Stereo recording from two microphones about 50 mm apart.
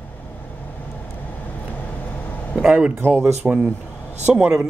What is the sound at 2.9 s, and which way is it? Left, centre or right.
Speech, right.